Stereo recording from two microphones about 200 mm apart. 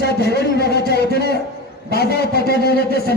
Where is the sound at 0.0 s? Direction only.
55° left (ahead or behind).